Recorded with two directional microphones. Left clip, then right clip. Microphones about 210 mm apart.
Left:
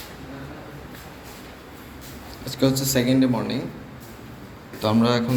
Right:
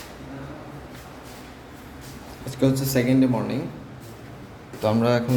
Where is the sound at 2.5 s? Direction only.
10° right (ahead or behind).